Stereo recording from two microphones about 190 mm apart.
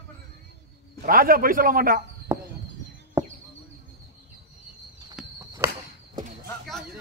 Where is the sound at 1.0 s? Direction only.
50° right (ahead or behind).